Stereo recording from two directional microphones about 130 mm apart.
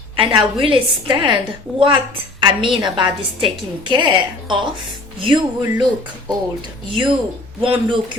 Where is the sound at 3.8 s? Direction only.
35° right (ahead or behind).